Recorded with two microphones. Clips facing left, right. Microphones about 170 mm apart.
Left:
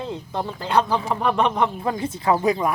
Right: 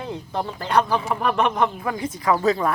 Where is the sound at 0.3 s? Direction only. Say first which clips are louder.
Right 1 dB; 10° left (ahead or behind).